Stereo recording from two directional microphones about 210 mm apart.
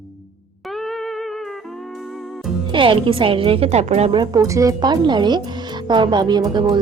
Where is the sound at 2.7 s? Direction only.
25° right (ahead or behind).